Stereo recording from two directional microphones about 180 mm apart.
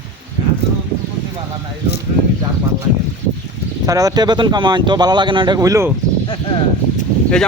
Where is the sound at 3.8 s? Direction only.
20° right (ahead or behind).